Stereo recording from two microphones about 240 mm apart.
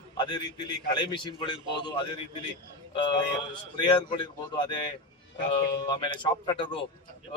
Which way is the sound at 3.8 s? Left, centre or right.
Centre.